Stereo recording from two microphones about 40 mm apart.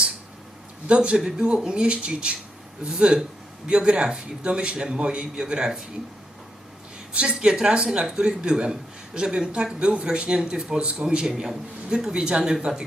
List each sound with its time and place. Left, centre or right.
0.9 s a man's voice: right
7.1 s a man's voice: right